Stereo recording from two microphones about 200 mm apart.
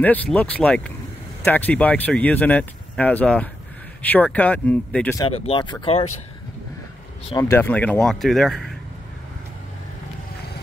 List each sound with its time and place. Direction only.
0.0 s speech: 10° left (ahead or behind)
5.2 s speech: 30° left (ahead or behind)
7.2 s speech: 15° left (ahead or behind); by 8.7 s centre (ahead or behind)